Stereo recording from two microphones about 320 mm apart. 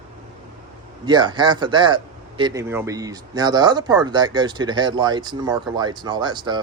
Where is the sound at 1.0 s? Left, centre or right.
Centre.